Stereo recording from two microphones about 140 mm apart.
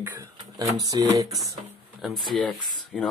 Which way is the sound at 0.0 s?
20° right (ahead or behind).